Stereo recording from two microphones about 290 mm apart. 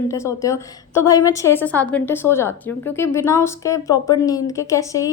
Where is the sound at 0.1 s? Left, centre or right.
Centre.